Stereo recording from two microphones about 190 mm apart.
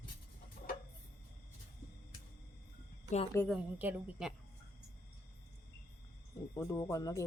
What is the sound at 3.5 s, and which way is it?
Speech, 5° right (ahead or behind).